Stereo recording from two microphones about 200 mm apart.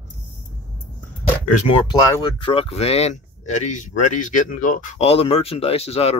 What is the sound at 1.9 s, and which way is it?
Speech, 20° left (ahead or behind).